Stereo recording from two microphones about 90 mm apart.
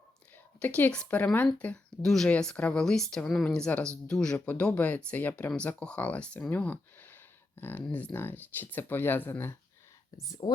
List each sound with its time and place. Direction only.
0.6 s speech: 15° left (ahead or behind)
6.5 s a sound: 20° left (ahead or behind)
7.9 s speech: 15° left (ahead or behind)
10.4 s speech: 60° left (ahead or behind)